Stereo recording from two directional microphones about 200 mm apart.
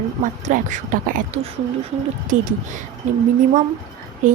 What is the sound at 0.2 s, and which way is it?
A woman's voice, 40° right (ahead or behind).